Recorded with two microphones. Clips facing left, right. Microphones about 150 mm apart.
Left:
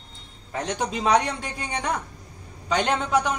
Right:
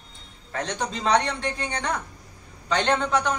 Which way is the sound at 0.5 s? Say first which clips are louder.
Left 2 dB; 15° left (ahead or behind).